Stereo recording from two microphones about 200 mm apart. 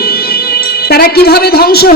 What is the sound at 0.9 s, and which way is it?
A woman's voice, 50° left (ahead or behind).